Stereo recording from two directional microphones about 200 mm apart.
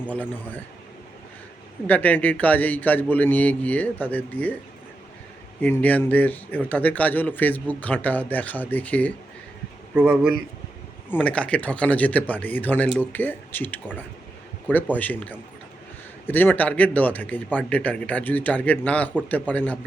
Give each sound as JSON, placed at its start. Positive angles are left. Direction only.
{"t": 0.1, "sound": "speech", "side_deg": 10}
{"t": 1.9, "sound": "speech", "side_deg": 10}
{"t": 5.6, "sound": "speech", "side_deg": 10}
{"t": 9.9, "sound": "speech", "side_deg": -5}
{"t": 11.1, "sound": "speech", "side_deg": 5}